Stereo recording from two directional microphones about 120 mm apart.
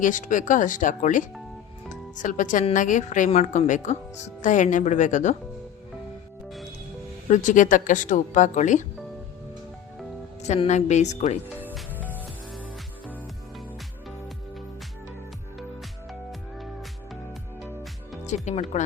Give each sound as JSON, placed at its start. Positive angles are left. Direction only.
{"t": 0.0, "sound": "speech", "side_deg": 90}
{"t": 1.9, "sound": "music", "side_deg": 90}
{"t": 2.7, "sound": "speech", "side_deg": 90}
{"t": 7.3, "sound": "speech", "side_deg": 90}
{"t": 10.7, "sound": "a woman's voice", "side_deg": 75}
{"t": 18.4, "sound": "a woman's voice", "side_deg": 70}